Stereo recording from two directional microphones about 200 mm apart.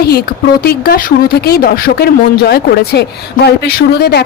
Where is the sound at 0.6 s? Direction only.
50° left (ahead or behind).